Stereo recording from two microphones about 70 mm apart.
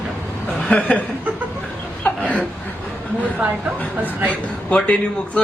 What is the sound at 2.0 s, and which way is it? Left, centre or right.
Chuckle, centre.